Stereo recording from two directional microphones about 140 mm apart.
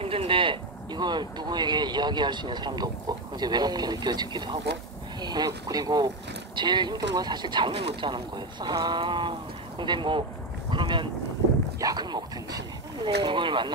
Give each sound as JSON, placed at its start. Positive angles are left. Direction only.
{"t": 0.0, "sound": "speech", "side_deg": -40}
{"t": 10.7, "sound": "boat", "side_deg": -35}
{"t": 11.8, "sound": "dog", "side_deg": -30}
{"t": 13.0, "sound": "speech", "side_deg": -35}